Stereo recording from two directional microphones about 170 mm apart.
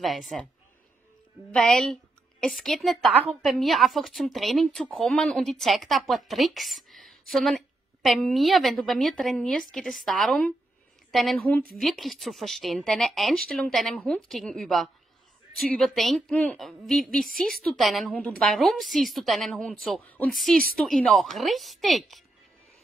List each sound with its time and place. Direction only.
0.0 s a woman's voice: centre (ahead or behind)
1.5 s a woman's voice: 5° left (ahead or behind)
17.0 s a woman's voice: 55° right (ahead or behind)
17.4 s a woman's voice: centre (ahead or behind)